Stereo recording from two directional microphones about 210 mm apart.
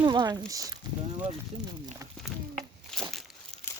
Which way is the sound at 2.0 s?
15° right (ahead or behind).